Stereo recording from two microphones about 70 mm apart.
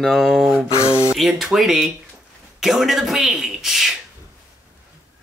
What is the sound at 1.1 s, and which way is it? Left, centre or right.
Speech, centre.